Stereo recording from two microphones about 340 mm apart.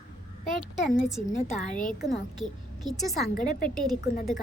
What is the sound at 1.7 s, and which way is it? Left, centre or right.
Speech, left.